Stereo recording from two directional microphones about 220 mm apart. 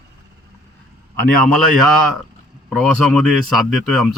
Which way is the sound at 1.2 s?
Centre (ahead or behind).